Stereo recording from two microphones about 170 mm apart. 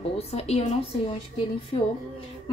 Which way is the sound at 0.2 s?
35° left (ahead or behind).